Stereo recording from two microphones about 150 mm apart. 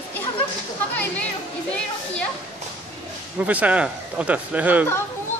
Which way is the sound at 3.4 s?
10° right (ahead or behind).